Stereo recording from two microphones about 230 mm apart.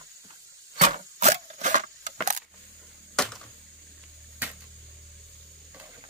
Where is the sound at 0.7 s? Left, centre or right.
Right.